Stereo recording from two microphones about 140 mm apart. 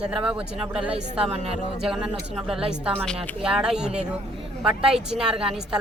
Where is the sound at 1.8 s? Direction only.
5° right (ahead or behind).